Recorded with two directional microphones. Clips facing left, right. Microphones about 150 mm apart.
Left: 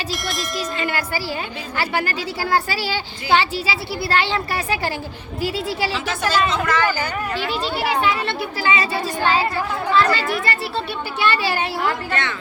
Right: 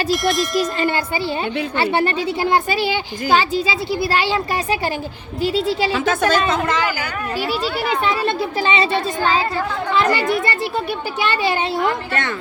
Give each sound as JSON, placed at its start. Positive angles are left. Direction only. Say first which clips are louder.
{"t": 0.1, "sound": "speech", "louder": "right 9 dB", "side_deg": 0}
{"t": 0.8, "sound": "speech", "louder": "right 4 dB", "side_deg": -25}
{"t": 5.9, "sound": "a woman's voice", "louder": "right 5 dB", "side_deg": -50}
{"t": 6.7, "sound": "speech", "louder": "left 1 dB", "side_deg": -15}
{"t": 8.4, "sound": "speech", "louder": "right 3 dB", "side_deg": -25}
{"t": 10.0, "sound": "speech", "louder": "right 5 dB", "side_deg": -20}